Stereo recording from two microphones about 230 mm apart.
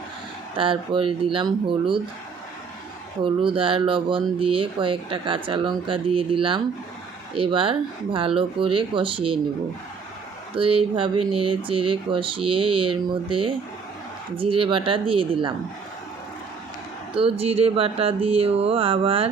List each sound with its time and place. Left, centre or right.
0.5 s speech: right
3.2 s speech: right
10.5 s speech: right
17.4 s speech: right